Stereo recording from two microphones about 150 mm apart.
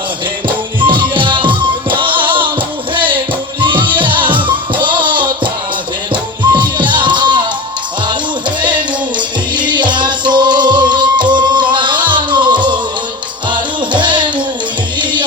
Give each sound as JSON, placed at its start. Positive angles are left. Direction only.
{"t": 0.4, "sound": "music", "side_deg": -35}